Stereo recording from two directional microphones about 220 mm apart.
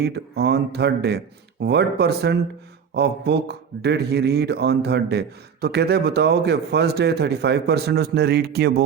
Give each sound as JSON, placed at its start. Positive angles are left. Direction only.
{"t": 0.0, "sound": "a man's voice", "side_deg": -50}